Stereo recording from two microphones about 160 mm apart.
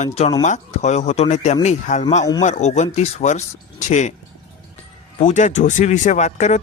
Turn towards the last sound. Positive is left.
turn(degrees=50)  # may be behind; listen again after turning